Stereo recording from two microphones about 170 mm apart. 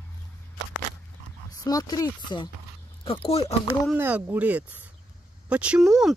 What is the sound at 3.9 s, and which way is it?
Speech, 10° right (ahead or behind).